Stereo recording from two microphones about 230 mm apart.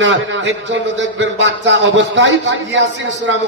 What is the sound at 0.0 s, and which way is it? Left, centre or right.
A man's voice, right.